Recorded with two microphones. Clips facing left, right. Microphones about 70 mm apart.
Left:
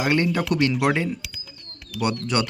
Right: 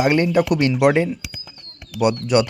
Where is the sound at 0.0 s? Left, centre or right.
Right.